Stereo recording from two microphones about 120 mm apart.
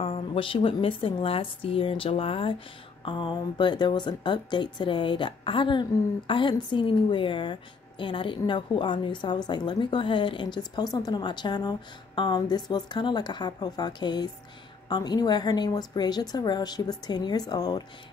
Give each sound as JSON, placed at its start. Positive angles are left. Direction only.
{"t": 0.0, "sound": "a woman's voice", "side_deg": 50}